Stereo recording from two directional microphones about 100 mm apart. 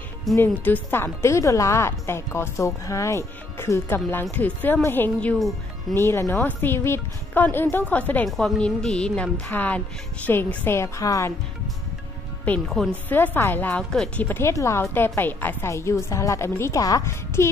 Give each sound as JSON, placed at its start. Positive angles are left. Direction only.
{"t": 0.3, "sound": "speech", "side_deg": 0}
{"t": 0.8, "sound": "a woman's voice", "side_deg": 20}
{"t": 8.3, "sound": "a woman's voice", "side_deg": 5}
{"t": 12.6, "sound": "speech", "side_deg": 0}
{"t": 13.1, "sound": "a woman's voice", "side_deg": 20}
{"t": 14.4, "sound": "speech", "side_deg": 30}